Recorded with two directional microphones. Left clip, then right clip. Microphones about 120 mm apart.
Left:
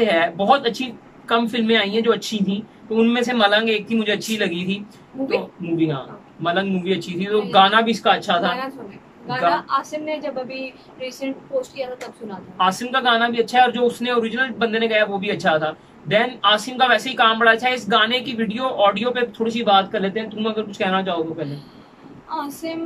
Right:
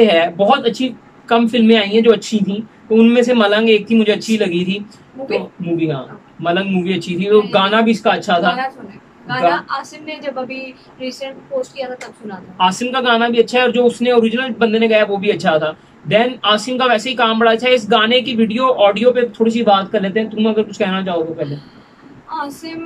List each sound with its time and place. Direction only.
0.0 s speech: 10° right (ahead or behind)
6.4 s speech: 10° right (ahead or behind)
9.5 s speech: 25° left (ahead or behind)
12.5 s speech: 10° right (ahead or behind)
22.3 s speech: 25° left (ahead or behind)